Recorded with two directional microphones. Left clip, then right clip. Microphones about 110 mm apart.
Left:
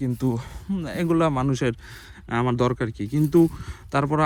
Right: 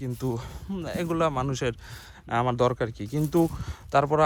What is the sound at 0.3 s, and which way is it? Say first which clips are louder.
Speech: left 3 dB; 45° right (ahead or behind).